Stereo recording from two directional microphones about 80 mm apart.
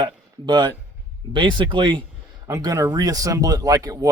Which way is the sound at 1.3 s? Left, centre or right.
Right.